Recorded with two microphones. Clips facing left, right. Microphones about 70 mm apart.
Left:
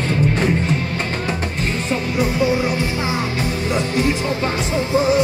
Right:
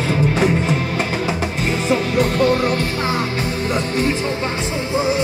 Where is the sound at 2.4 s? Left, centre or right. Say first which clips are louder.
Right 2 dB; right.